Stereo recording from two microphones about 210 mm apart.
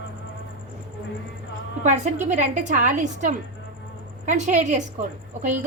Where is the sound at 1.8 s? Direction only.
35° right (ahead or behind).